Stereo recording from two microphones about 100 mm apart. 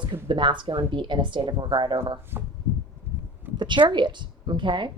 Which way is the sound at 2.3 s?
25° right (ahead or behind).